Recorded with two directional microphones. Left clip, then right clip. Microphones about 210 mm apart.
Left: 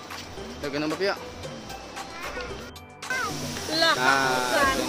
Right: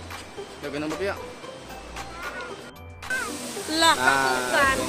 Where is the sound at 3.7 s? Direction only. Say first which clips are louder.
Right 2 dB; 55° right (ahead or behind).